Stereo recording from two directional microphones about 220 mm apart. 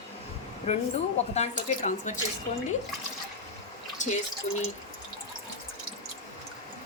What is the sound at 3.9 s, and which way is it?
Drip, 35° left (ahead or behind).